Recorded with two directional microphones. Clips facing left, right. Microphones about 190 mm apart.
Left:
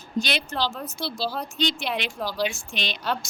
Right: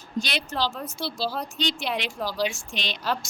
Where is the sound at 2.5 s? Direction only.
60° left (ahead or behind).